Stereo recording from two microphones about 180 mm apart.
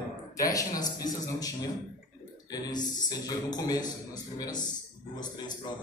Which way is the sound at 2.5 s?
20° left (ahead or behind).